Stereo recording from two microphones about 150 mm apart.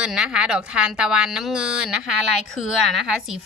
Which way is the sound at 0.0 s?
5° right (ahead or behind).